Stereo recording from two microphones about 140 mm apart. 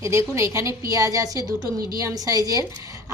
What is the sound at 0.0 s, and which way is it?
Speech, 20° right (ahead or behind).